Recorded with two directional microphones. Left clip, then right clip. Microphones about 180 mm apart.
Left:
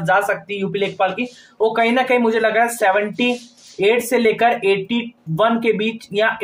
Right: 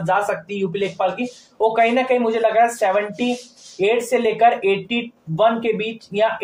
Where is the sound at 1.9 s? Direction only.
30° left (ahead or behind).